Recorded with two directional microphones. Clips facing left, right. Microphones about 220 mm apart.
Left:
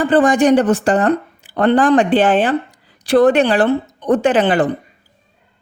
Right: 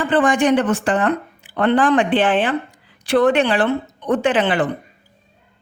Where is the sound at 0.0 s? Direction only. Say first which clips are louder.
Left 4 dB; 40° left (ahead or behind).